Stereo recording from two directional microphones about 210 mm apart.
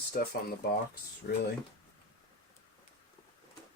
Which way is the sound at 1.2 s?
45° left (ahead or behind).